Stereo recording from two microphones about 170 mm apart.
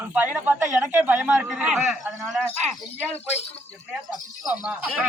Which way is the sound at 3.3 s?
40° left (ahead or behind).